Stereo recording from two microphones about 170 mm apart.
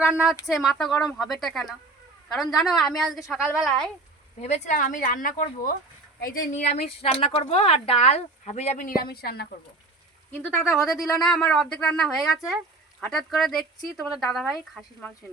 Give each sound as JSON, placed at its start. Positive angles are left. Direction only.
{"t": 0.0, "sound": "speech", "side_deg": -5}
{"t": 4.4, "sound": "speech", "side_deg": 40}
{"t": 6.7, "sound": "speech", "side_deg": 35}
{"t": 9.0, "sound": "a woman's voice", "side_deg": 65}
{"t": 10.8, "sound": "speech", "side_deg": 20}
{"t": 11.2, "sound": "speech", "side_deg": 5}